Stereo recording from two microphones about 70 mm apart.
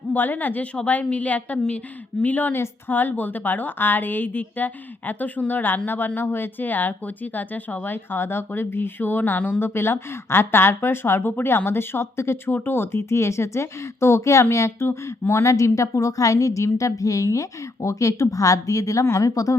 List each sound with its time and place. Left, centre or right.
0.1 s a woman's voice: left
14.8 s a woman's voice: left